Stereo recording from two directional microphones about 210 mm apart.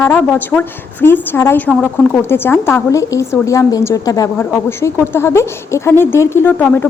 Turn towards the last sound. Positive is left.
turn(degrees=10)  # may be behind; listen again after turning